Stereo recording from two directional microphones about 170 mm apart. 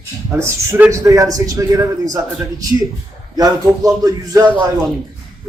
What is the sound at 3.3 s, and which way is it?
A man's voice, 20° right (ahead or behind).